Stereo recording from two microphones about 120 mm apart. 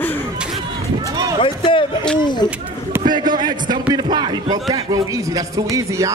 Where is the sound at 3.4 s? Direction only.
35° right (ahead or behind).